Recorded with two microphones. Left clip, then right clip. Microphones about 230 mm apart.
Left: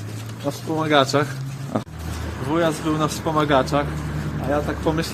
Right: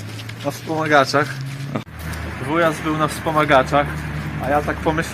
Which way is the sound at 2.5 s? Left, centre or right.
Centre.